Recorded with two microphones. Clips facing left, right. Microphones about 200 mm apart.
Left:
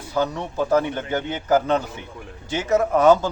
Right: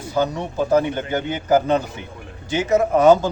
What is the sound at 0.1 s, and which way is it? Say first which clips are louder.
A man's voice: right 2 dB; 10° right (ahead or behind).